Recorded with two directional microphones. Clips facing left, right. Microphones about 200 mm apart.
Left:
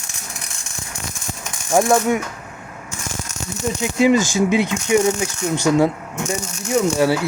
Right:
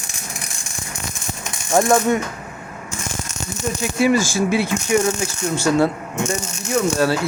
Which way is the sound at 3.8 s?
20° left (ahead or behind).